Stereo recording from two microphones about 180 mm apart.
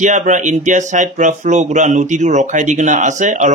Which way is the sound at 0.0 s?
45° right (ahead or behind).